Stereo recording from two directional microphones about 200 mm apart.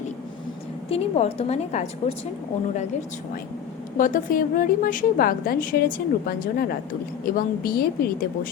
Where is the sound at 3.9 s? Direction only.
40° left (ahead or behind).